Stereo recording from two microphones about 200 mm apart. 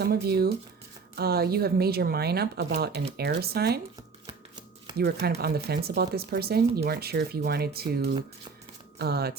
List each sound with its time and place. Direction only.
0.0 s speech: 50° right (ahead or behind)
4.9 s speech: 50° right (ahead or behind)